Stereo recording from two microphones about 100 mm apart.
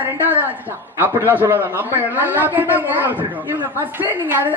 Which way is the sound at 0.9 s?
20° right (ahead or behind).